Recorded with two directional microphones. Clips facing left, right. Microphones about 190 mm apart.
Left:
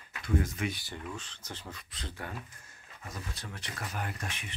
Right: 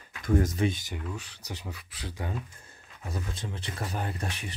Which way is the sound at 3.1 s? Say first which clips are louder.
Right 6 dB; 25° right (ahead or behind).